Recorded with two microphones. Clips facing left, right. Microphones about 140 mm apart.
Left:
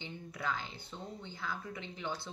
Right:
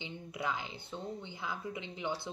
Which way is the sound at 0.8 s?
20° right (ahead or behind).